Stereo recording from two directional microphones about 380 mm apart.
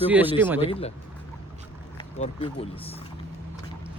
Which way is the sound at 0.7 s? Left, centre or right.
Centre.